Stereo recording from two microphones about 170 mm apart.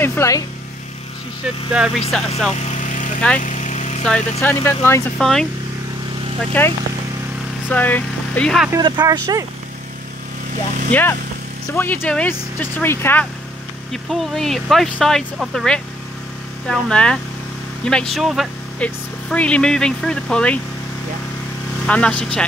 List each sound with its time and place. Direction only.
0.0 s speech: 15° left (ahead or behind)
1.7 s speech: centre (ahead or behind)
2.5 s vehicle: 40° left (ahead or behind)
4.4 s speech: 15° left (ahead or behind)
5.2 s speech: centre (ahead or behind)
6.6 s speech: 10° left (ahead or behind)
8.7 s speech: 20° right (ahead or behind)
10.9 s speech: 10° left (ahead or behind)
14.0 s speech: centre (ahead or behind)
21.8 s speech: 5° left (ahead or behind)